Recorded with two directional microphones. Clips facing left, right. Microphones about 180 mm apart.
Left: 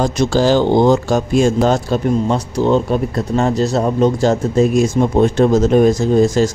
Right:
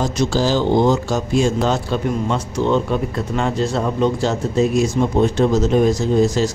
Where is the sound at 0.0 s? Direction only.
60° left (ahead or behind).